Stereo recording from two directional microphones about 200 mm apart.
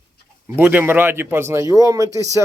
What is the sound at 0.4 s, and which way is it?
Speech, 10° right (ahead or behind).